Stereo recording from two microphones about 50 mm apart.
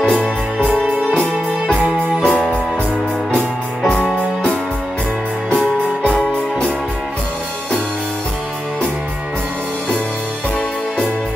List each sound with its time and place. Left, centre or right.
0.7 s music: right
2.2 s music: left
3.3 s music: centre
6.0 s music: centre